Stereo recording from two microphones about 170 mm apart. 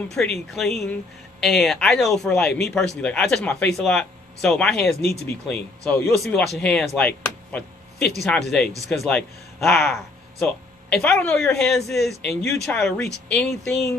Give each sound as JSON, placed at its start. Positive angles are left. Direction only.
{"t": 0.1, "sound": "speech", "side_deg": 5}
{"t": 5.0, "sound": "speech", "side_deg": 70}
{"t": 5.5, "sound": "speech", "side_deg": 10}
{"t": 7.0, "sound": "a sound", "side_deg": 10}
{"t": 8.2, "sound": "speech", "side_deg": 0}